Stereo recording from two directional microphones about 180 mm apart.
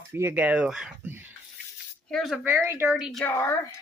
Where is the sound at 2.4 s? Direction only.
10° right (ahead or behind).